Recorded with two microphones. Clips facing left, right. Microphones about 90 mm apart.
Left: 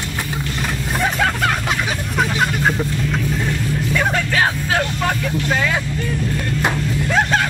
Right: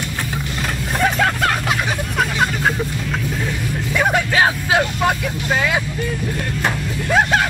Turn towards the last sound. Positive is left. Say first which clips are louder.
# right 1 dB
turn(degrees=-10)  # may be behind; listen again after turning